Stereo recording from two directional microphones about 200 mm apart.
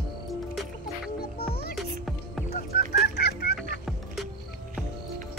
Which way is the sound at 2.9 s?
55° left (ahead or behind).